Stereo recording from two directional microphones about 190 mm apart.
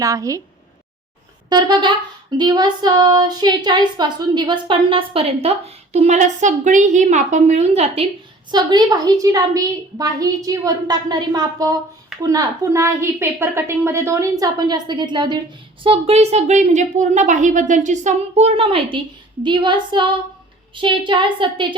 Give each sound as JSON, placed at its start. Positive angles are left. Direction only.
{"t": 0.0, "sound": "a woman's voice", "side_deg": -15}
{"t": 1.5, "sound": "a woman's voice", "side_deg": -20}
{"t": 8.4, "sound": "a woman's voice", "side_deg": -20}